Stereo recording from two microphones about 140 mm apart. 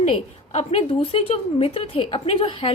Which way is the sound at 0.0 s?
45° left (ahead or behind).